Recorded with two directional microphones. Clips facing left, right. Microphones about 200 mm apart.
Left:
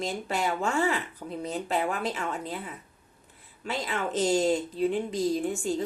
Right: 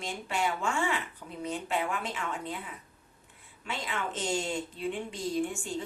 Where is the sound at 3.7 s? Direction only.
40° left (ahead or behind).